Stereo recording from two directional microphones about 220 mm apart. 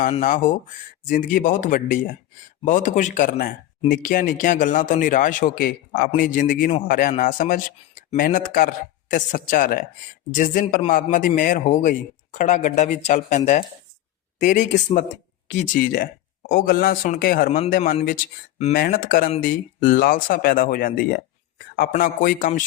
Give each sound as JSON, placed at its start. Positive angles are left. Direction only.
{"t": 0.0, "sound": "a man's voice", "side_deg": 35}